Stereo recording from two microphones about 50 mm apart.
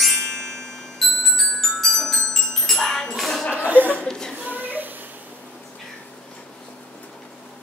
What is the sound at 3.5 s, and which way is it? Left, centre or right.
Chuckle, right.